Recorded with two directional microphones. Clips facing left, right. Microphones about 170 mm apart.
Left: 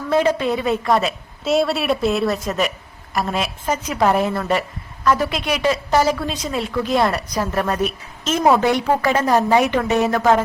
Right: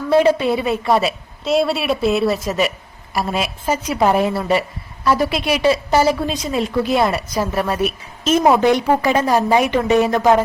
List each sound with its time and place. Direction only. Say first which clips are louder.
0.1 s a woman's voice: right 4 dB; 15° right (ahead or behind)